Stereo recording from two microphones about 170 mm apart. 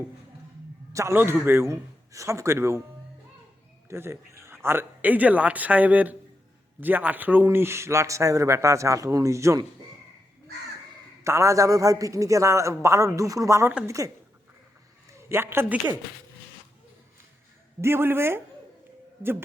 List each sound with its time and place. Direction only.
0.9 s a man's voice: 15° right (ahead or behind)
3.8 s a man's voice: 15° right (ahead or behind)
11.2 s a man's voice: 15° right (ahead or behind)
15.3 s a man's voice: 15° right (ahead or behind)
17.7 s a man's voice: 15° right (ahead or behind)